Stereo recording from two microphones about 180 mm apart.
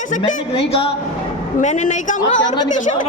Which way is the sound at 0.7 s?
30° left (ahead or behind).